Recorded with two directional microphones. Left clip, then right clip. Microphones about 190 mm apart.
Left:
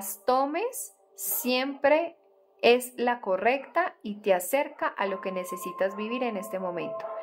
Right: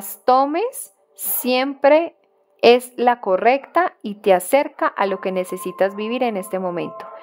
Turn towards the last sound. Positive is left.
turn(degrees=-45)  # may be behind; listen again after turning